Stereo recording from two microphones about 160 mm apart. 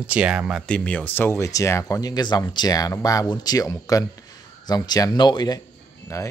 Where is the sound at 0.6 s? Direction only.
5° left (ahead or behind).